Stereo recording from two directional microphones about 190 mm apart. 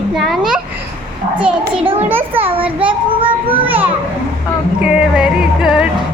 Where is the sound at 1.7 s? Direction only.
30° right (ahead or behind).